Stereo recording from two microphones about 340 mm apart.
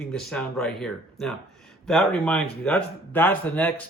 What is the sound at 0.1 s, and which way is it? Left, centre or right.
Speech, centre.